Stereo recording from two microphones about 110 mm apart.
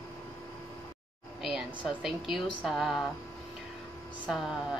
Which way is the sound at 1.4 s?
5° right (ahead or behind).